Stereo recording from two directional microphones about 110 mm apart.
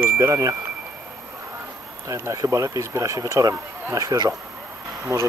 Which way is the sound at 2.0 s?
30° right (ahead or behind).